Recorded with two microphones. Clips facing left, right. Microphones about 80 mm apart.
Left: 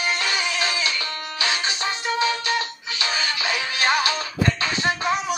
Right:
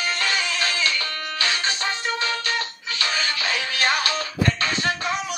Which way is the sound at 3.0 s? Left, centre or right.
Centre.